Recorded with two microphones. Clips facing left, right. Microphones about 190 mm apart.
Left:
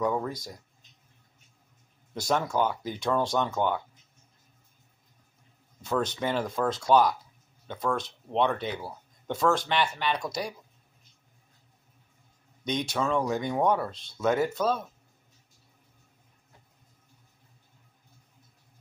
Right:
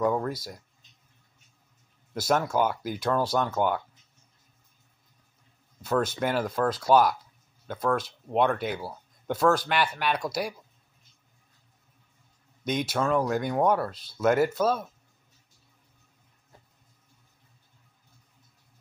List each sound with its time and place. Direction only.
0.0 s speech: 5° right (ahead or behind)
2.1 s speech: 5° right (ahead or behind)
5.8 s speech: 5° right (ahead or behind)
12.6 s speech: 5° right (ahead or behind)